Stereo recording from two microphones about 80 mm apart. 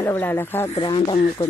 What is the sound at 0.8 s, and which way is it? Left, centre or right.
Speech, left.